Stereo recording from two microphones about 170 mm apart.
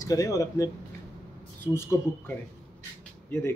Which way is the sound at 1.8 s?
15° left (ahead or behind).